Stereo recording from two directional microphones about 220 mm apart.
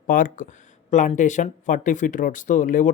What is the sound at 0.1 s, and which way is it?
Speech, 35° left (ahead or behind).